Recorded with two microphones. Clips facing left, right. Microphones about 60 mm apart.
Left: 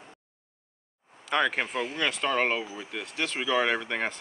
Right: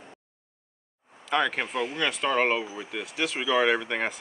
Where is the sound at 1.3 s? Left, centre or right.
Centre.